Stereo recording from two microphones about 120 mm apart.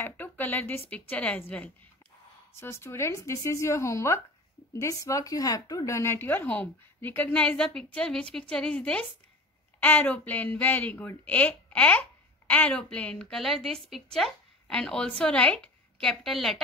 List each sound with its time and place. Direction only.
0.0 s speech: 15° left (ahead or behind)